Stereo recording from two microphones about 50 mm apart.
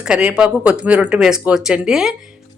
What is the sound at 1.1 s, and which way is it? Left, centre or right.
Speech, centre.